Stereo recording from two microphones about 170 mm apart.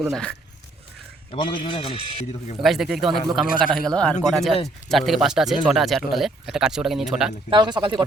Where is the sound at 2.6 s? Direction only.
Centre (ahead or behind).